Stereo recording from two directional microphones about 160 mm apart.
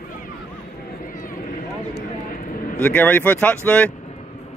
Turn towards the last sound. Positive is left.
turn(degrees=10)  # may be behind; listen again after turning